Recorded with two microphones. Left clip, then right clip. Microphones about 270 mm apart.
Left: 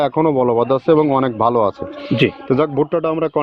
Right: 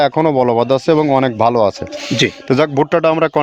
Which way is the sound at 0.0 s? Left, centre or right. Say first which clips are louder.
Right 3 dB; right.